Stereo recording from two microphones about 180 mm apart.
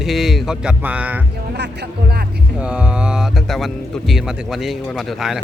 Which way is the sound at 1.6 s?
65° right (ahead or behind).